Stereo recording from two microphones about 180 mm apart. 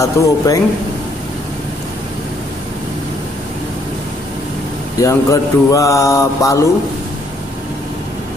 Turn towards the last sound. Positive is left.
turn(degrees=15)  # may be behind; listen again after turning